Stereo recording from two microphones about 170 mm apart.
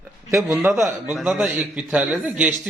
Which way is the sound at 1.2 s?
Centre (ahead or behind).